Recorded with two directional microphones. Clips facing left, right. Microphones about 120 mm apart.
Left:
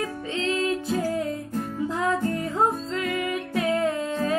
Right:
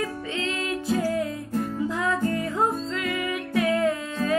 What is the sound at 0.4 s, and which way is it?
Music, 30° left (ahead or behind).